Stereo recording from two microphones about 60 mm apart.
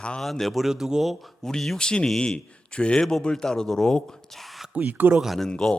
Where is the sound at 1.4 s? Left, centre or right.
Centre.